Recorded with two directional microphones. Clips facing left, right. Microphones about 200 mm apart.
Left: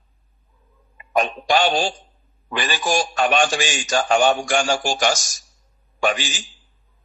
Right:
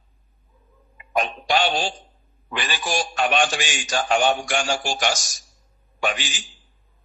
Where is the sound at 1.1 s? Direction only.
45° left (ahead or behind).